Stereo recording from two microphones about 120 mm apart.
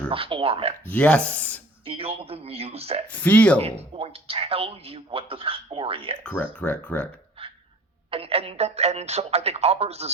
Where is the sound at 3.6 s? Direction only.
55° right (ahead or behind).